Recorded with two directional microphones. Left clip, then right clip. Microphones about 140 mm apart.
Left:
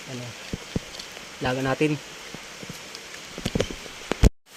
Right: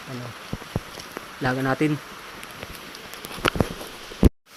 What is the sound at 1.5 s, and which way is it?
Speech, 10° left (ahead or behind).